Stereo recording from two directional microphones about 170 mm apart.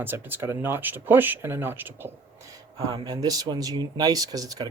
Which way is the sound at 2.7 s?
25° right (ahead or behind).